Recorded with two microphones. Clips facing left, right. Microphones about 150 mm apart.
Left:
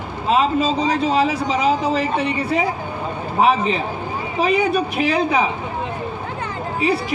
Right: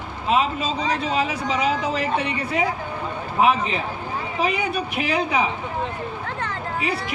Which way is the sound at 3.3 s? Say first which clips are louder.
Left 3 dB; 35° left (ahead or behind).